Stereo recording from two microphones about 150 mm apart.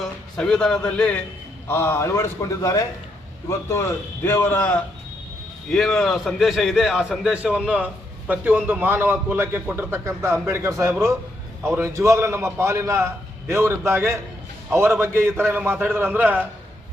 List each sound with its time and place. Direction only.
0.0 s a man's voice: 5° left (ahead or behind); by 16.5 s 15° right (ahead or behind)